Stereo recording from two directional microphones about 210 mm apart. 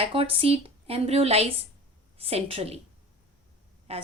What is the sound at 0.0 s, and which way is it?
A woman's voice, 25° right (ahead or behind).